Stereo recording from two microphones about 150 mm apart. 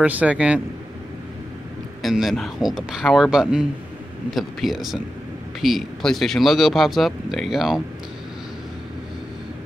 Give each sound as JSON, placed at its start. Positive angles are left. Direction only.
{"t": 0.0, "sound": "a man's voice", "side_deg": -10}
{"t": 2.0, "sound": "speech", "side_deg": 0}